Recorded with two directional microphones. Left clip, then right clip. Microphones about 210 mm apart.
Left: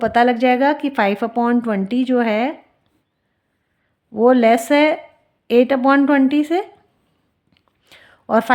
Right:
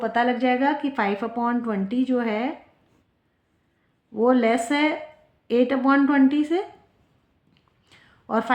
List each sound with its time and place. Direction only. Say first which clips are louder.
0.0 s a woman's voice: left 7 dB; 50° left (ahead or behind)
4.1 s a woman's voice: left 7 dB; 45° left (ahead or behind)
7.5 s whispering: left 8 dB; 45° left (ahead or behind)